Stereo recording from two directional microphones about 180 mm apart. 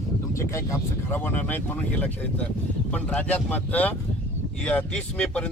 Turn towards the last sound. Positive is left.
turn(degrees=5)  # may be behind; listen again after turning